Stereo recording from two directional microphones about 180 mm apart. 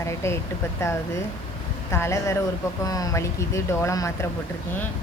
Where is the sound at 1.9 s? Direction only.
15° left (ahead or behind).